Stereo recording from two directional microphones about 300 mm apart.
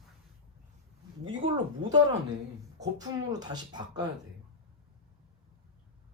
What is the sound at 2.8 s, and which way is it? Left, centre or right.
Speech, centre.